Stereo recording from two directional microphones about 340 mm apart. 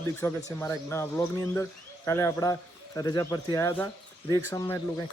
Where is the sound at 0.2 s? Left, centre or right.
Centre.